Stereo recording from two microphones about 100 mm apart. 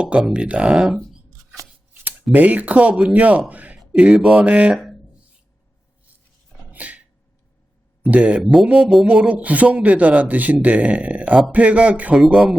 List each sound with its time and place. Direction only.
0.0 s a man's voice: 10° right (ahead or behind)
2.3 s a man's voice: 15° right (ahead or behind)
3.5 s a sound: 15° right (ahead or behind)
3.8 s speech: 10° right (ahead or behind)
6.7 s a sound: 15° right (ahead or behind)
8.1 s a man's voice: 15° right (ahead or behind)